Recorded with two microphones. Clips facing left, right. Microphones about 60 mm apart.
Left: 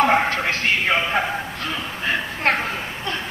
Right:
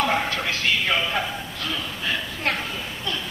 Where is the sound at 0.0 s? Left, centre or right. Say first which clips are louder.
Left 5 dB; left.